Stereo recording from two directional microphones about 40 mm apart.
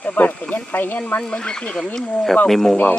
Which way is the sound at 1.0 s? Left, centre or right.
Left.